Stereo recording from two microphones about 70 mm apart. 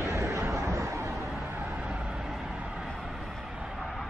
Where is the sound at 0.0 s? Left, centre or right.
Right.